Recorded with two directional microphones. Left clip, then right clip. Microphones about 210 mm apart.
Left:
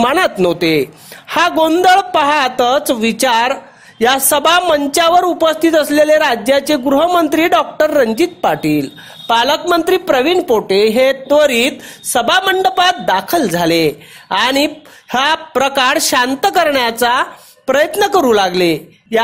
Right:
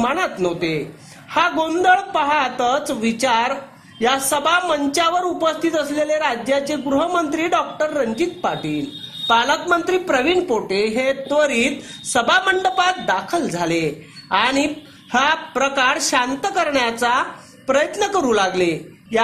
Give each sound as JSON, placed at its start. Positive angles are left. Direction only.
{"t": 0.0, "sound": "a woman's voice", "side_deg": 45}